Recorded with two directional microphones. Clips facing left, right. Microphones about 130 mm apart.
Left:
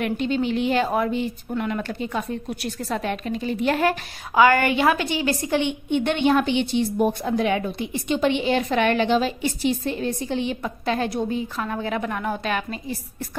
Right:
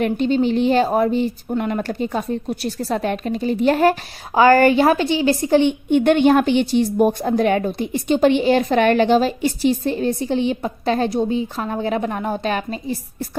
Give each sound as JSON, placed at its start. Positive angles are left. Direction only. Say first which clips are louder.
{"t": 0.0, "sound": "a woman's voice", "louder": "right 5 dB", "side_deg": -35}